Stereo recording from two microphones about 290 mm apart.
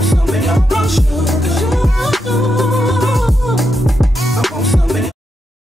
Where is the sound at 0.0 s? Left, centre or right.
Centre.